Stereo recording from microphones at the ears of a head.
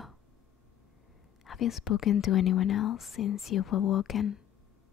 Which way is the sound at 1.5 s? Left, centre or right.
Left.